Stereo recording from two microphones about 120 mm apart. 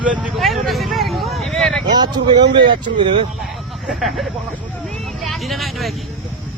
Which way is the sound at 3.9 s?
Centre (ahead or behind).